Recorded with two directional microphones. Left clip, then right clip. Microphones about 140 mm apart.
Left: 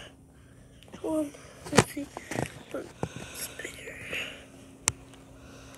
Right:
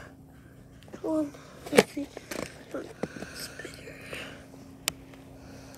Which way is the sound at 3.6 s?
45° left (ahead or behind).